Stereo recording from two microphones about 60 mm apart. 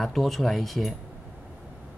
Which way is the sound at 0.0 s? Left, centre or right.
Centre.